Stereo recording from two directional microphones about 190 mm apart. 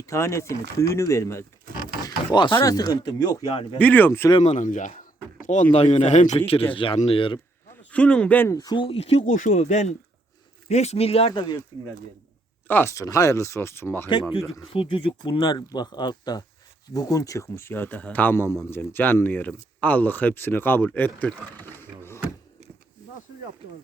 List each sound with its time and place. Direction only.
0.0 s speech: 15° left (ahead or behind)
3.8 s speech: 10° left (ahead or behind)
4.3 s speech: 30° left (ahead or behind)
4.5 s speech: 40° left (ahead or behind)
6.7 s speech: 25° left (ahead or behind)
7.7 s speech: 5° left (ahead or behind); by 11.6 s 20° left (ahead or behind)
12.6 s speech: 10° left (ahead or behind)
14.7 s speech: 30° left (ahead or behind); by 22.2 s 10° left (ahead or behind)